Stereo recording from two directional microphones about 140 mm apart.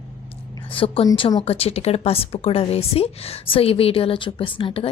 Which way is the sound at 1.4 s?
45° left (ahead or behind).